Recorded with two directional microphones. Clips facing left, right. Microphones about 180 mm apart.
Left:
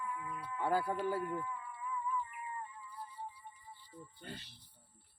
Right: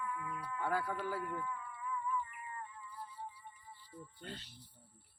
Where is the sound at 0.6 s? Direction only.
30° left (ahead or behind).